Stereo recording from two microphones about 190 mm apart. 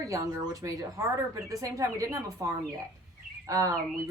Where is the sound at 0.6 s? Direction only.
15° right (ahead or behind).